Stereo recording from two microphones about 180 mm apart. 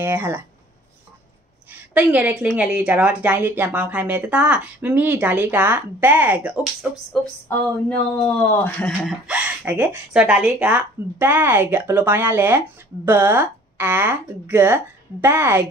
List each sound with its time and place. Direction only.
0.0 s speech: 10° right (ahead or behind)
1.7 s speech: 10° right (ahead or behind)
7.4 s speech: 10° left (ahead or behind); by 15.6 s 10° right (ahead or behind)